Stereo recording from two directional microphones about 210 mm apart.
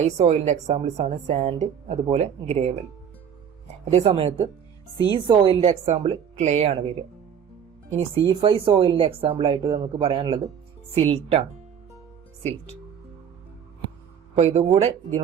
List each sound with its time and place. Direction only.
0.0 s speech: 30° right (ahead or behind)
3.9 s a woman's voice: 25° right (ahead or behind)
7.9 s a woman's voice: 25° right (ahead or behind)
14.3 s a woman's voice: 30° right (ahead or behind)